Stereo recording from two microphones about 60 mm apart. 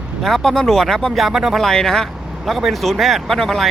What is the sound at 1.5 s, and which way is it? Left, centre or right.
Speech, centre.